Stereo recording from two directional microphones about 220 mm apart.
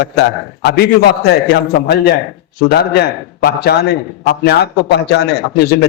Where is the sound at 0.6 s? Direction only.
50° left (ahead or behind).